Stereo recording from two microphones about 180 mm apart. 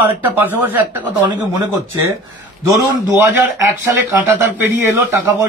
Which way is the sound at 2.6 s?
15° right (ahead or behind).